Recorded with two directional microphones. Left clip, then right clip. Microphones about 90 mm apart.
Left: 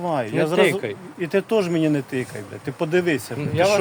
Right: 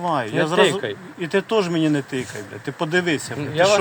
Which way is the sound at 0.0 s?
35° left (ahead or behind).